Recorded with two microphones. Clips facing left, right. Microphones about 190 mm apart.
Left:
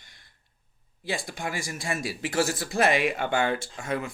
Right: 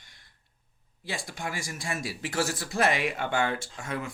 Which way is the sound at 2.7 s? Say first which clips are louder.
Left 2 dB; 15° left (ahead or behind).